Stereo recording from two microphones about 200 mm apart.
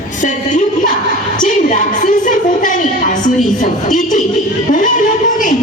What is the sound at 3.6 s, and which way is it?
A woman's voice, 40° left (ahead or behind).